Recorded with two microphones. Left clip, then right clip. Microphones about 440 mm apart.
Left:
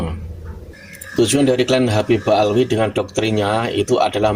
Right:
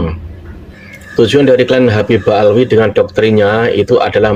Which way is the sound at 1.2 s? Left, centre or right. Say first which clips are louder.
Right 8 dB; left.